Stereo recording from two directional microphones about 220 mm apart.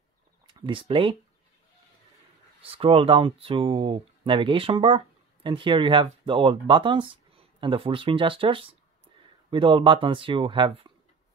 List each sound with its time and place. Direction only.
0.5 s speech: 20° right (ahead or behind)
2.6 s speech: 25° right (ahead or behind)